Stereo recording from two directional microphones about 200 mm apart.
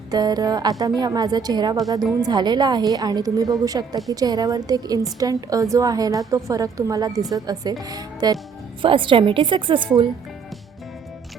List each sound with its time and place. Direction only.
0.1 s a woman's voice: 20° right (ahead or behind)